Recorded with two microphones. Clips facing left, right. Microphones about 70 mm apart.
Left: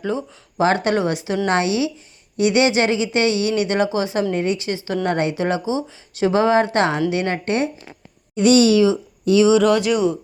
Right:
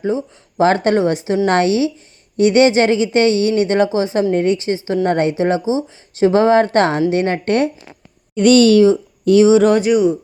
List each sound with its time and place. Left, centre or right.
0.1 s speech: left
0.6 s speech: right
1.5 s speech: right
8.4 s speech: right
8.8 s speech: right
9.9 s speech: centre